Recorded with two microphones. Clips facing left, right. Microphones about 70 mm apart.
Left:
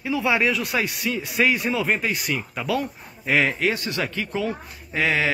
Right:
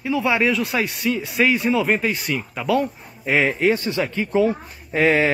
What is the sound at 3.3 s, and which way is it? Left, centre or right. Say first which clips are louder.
Speech: right 3 dB; centre.